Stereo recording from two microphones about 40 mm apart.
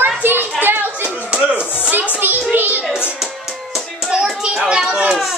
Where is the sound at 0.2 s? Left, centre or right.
Right.